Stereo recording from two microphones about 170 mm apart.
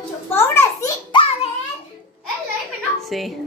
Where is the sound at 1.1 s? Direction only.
30° left (ahead or behind).